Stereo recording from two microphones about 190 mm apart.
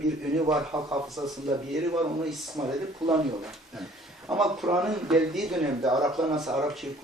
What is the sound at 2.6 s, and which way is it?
Speech, 10° right (ahead or behind).